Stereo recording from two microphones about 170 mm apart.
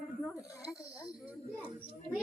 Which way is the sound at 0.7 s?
5° right (ahead or behind).